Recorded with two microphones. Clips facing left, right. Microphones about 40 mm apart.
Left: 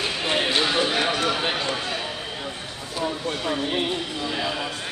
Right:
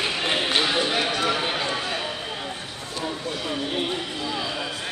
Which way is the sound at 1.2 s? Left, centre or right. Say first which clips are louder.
Even; centre.